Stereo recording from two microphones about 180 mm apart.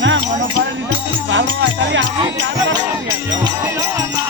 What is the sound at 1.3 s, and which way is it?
Speech, 90° right.